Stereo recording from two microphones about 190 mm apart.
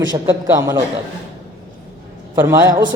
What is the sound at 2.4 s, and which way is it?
Speech, 15° right (ahead or behind).